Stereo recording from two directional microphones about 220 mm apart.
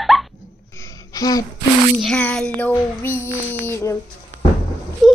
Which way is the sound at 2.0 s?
5° left (ahead or behind).